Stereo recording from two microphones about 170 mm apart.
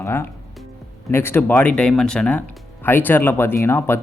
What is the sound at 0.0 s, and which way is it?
Speech, 15° left (ahead or behind).